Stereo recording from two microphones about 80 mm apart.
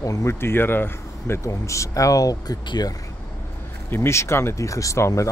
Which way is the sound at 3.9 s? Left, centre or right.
Left.